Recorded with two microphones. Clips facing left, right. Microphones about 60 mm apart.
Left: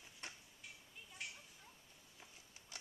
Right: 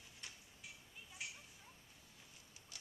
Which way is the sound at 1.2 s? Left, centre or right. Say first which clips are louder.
Even; centre.